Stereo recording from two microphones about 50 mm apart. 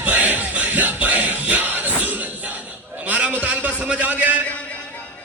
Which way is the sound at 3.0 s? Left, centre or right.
Right.